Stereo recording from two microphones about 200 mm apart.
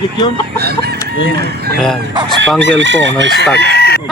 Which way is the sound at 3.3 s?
55° left (ahead or behind).